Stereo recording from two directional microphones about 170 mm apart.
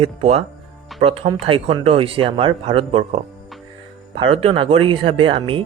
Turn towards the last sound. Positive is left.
turn(degrees=-30)  # may be behind; listen again after turning